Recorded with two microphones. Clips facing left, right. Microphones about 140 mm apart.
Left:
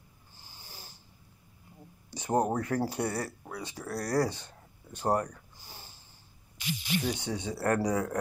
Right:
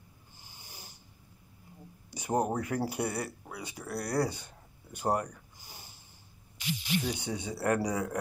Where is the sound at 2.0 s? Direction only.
10° right (ahead or behind).